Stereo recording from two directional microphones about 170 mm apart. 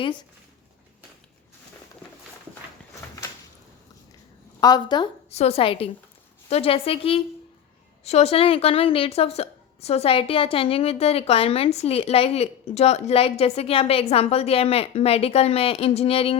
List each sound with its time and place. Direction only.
4.6 s speech: 25° left (ahead or behind)
5.3 s a woman's voice: 40° left (ahead or behind)